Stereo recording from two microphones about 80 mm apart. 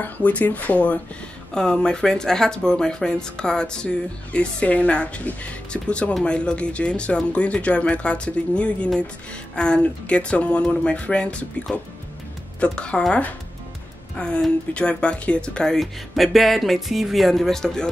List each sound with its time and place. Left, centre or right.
0.0 s speech: centre
12.5 s speech: centre